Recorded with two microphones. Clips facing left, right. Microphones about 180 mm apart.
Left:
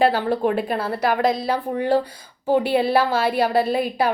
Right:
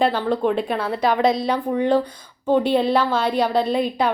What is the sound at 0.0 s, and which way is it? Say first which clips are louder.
Speech: left 1 dB; 50° left (ahead or behind).